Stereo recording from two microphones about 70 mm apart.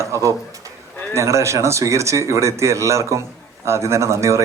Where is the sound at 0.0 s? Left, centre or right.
Right.